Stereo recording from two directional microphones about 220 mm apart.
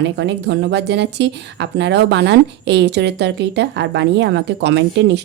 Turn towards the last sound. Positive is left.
turn(degrees=-50)  # may be behind; listen again after turning